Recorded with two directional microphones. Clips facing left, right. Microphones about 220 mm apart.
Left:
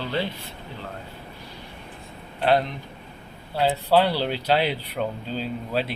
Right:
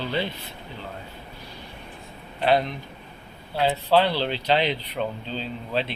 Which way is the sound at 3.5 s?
10° left (ahead or behind).